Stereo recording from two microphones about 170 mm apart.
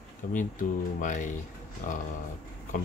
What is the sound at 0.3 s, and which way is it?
Speech, 50° left (ahead or behind).